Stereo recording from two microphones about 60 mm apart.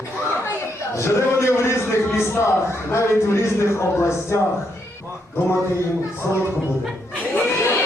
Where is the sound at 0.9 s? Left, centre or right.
Left.